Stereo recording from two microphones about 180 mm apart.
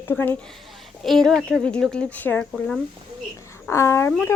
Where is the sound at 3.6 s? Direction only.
15° left (ahead or behind).